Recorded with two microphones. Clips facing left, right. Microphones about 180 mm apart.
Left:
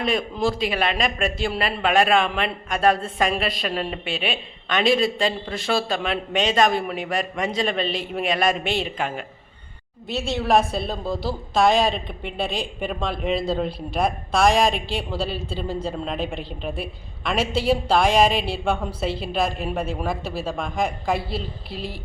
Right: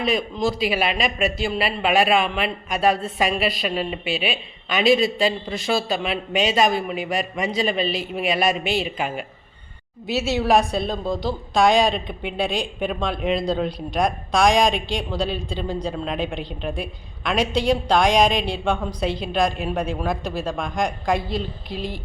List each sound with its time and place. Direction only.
0.0 s a woman's voice: centre (ahead or behind)